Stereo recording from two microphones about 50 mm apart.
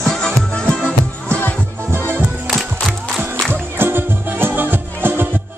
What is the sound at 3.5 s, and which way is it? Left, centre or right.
Music, right.